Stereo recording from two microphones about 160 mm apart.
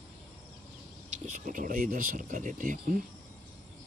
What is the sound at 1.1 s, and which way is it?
Speech, 55° right (ahead or behind).